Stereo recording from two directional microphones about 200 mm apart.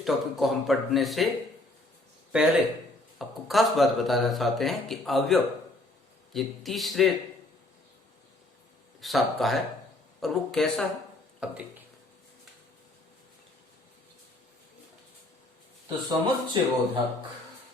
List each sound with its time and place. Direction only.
0.0 s speech: centre (ahead or behind)
2.3 s speech: 5° right (ahead or behind)
9.0 s speech: centre (ahead or behind)
16.0 s speech: 20° right (ahead or behind)